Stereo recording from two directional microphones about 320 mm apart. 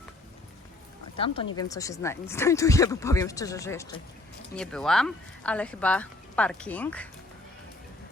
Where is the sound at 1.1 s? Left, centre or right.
Centre.